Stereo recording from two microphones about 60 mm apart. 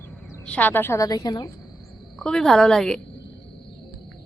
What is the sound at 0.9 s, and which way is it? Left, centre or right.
Speech, left.